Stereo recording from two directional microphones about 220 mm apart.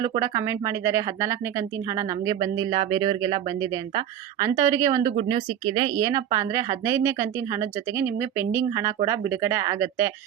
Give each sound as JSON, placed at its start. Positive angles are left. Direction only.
{"t": 0.0, "sound": "speech", "side_deg": -15}
{"t": 6.0, "sound": "speech", "side_deg": -15}